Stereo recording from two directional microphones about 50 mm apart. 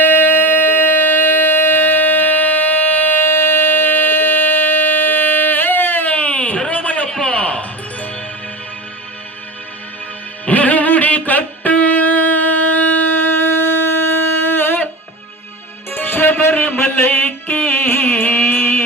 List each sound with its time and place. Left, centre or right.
0.0 s music: left
6.7 s a sound: left
10.4 s music: left
15.9 s music: left